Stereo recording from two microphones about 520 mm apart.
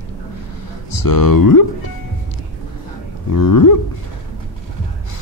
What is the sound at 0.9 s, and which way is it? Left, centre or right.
Speech, left.